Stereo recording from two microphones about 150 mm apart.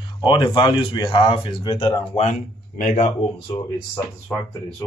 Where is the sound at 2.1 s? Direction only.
50° left (ahead or behind).